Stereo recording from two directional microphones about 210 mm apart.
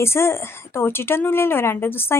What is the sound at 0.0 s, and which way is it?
A woman's voice, 10° left (ahead or behind).